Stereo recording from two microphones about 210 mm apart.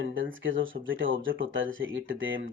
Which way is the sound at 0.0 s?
65° right (ahead or behind).